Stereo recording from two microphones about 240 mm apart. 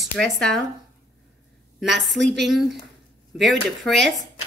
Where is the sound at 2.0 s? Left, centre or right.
Centre.